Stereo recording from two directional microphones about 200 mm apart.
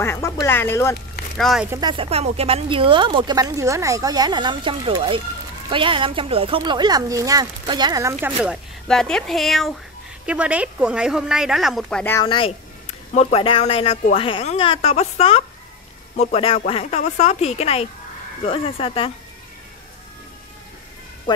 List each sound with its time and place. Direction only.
0.0 s speech: 15° left (ahead or behind)
1.4 s a woman's voice: centre (ahead or behind)
1.7 s speech: 20° right (ahead or behind)
8.8 s a woman's voice: 5° left (ahead or behind)
12.3 s speech: 25° left (ahead or behind)